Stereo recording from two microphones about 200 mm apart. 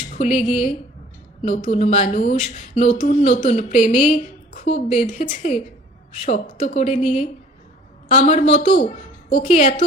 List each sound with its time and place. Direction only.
0.1 s a woman's voice: 35° left (ahead or behind)
8.1 s a woman's voice: 35° left (ahead or behind)